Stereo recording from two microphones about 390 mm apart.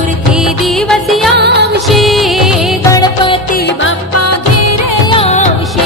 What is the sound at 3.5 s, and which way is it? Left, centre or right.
Music, left.